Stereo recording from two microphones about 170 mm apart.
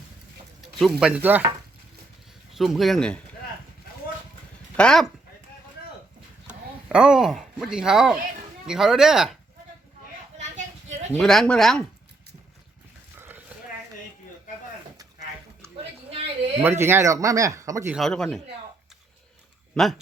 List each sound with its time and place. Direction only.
0.8 s speech: centre (ahead or behind)
2.5 s speech: centre (ahead or behind)
4.8 s speech: 5° left (ahead or behind)
6.5 s speech: 5° right (ahead or behind)
10.3 s a sound: 45° right (ahead or behind)
11.1 s speech: 5° left (ahead or behind)
13.1 s a sound: 10° right (ahead or behind)
16.6 s speech: 15° right (ahead or behind)
17.9 s speech: centre (ahead or behind)
19.7 s speech: centre (ahead or behind)